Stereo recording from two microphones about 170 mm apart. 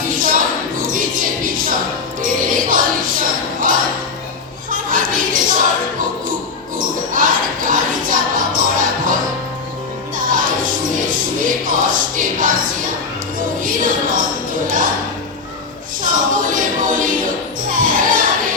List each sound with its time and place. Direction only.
0.1 s a sound: 55° right (ahead or behind)
2.2 s music: 55° right (ahead or behind)
4.7 s a sound: 55° right (ahead or behind)
6.7 s music: 55° right (ahead or behind)
10.2 s music: 55° right (ahead or behind)
13.6 s music: 50° right (ahead or behind)
16.0 s music: 50° right (ahead or behind)